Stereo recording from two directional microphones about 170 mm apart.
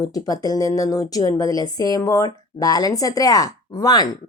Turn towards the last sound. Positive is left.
turn(degrees=20)  # may be behind; listen again after turning